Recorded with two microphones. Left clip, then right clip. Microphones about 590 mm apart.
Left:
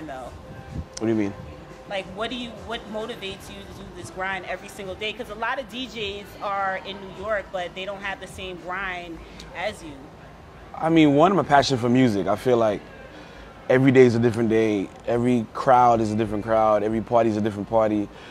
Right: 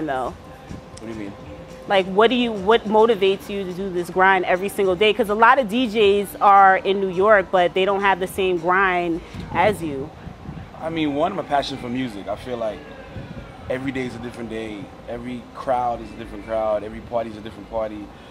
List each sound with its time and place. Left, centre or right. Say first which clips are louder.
1.0 s speech: left 11 dB; left
1.9 s speech: right 13 dB; right
10.8 s a man's voice: left 5 dB; left